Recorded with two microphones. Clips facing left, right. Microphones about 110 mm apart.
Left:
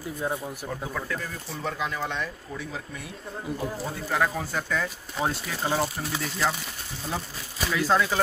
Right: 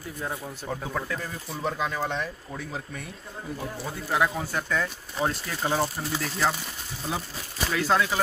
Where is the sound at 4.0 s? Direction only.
10° right (ahead or behind).